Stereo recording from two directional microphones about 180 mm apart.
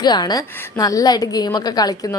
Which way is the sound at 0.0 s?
25° left (ahead or behind).